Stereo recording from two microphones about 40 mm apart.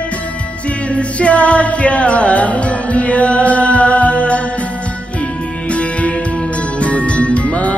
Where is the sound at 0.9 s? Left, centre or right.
Left.